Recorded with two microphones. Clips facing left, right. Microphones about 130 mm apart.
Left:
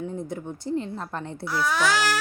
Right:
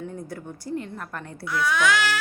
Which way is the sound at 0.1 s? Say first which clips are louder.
Left 3 dB; 20° left (ahead or behind).